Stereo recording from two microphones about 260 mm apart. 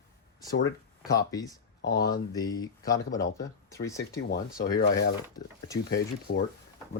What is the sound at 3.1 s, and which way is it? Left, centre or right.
Speech, left.